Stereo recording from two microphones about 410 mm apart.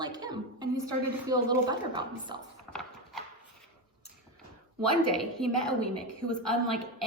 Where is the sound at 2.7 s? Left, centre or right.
Centre.